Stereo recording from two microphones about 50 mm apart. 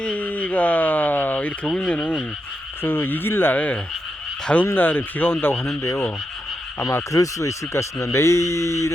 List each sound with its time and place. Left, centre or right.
0.2 s a sound: left
1.6 s frog: centre
2.8 s speech: left
3.5 s frog: left
4.6 s speech: left
7.1 s speech: left